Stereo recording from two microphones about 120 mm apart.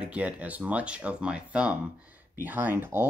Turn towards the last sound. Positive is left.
turn(degrees=-20)  # may be behind; listen again after turning